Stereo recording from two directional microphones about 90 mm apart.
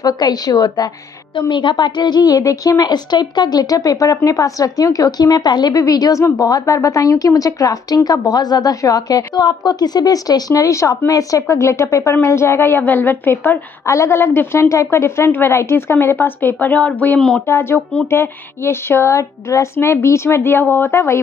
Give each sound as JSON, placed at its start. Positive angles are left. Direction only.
{"t": 0.0, "sound": "a woman's voice", "side_deg": 45}
{"t": 1.5, "sound": "a woman's voice", "side_deg": 60}
{"t": 13.8, "sound": "speech", "side_deg": 35}
{"t": 17.5, "sound": "speech", "side_deg": 25}